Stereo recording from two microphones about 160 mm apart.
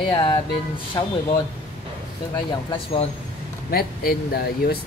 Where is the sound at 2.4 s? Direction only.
30° left (ahead or behind).